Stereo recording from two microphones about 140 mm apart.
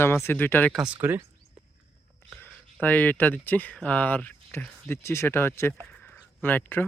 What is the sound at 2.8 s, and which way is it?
Speech, 10° left (ahead or behind).